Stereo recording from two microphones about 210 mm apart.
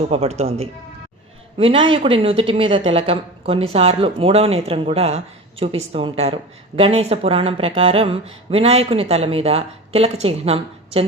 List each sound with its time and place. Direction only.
0.1 s speech: 30° right (ahead or behind)